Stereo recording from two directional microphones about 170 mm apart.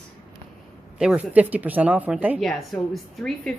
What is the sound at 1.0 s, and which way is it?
A woman's voice, 5° right (ahead or behind).